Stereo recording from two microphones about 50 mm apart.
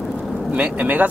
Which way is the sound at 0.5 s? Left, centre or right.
Right.